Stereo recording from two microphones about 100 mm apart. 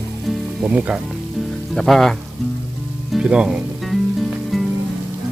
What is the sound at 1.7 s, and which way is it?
Speech, centre (ahead or behind).